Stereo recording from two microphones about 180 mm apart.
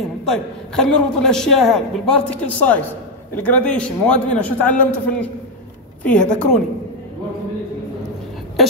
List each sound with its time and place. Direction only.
0.2 s a woman's voice: 5° left (ahead or behind)